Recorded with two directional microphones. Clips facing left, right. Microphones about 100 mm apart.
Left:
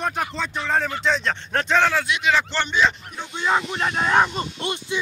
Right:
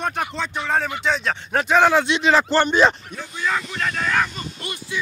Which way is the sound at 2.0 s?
30° right (ahead or behind).